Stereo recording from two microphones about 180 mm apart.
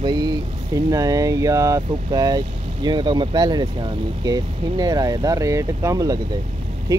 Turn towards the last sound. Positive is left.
turn(degrees=-20)  # may be behind; listen again after turning